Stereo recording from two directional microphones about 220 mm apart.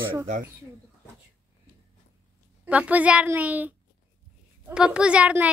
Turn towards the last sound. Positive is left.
turn(degrees=-5)  # may be behind; listen again after turning